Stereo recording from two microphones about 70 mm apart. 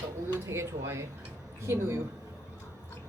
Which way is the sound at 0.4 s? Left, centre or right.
Right.